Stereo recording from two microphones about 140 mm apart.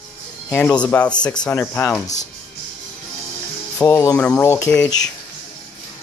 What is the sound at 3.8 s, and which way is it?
Speech, 20° left (ahead or behind).